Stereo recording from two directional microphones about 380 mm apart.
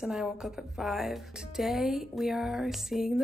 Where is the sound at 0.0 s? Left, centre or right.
Centre.